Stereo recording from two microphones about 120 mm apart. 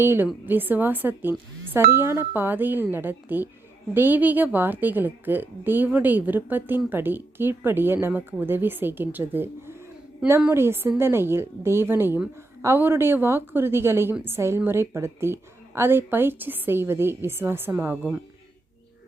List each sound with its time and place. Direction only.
0.0 s a woman's voice: 20° right (ahead or behind)